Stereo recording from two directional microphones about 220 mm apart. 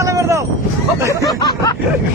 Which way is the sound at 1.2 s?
15° left (ahead or behind).